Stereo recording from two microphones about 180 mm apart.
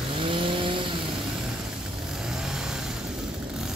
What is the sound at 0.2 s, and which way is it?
Vehicle, 30° right (ahead or behind).